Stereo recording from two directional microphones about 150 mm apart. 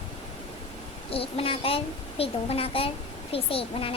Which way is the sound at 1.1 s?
40° left (ahead or behind).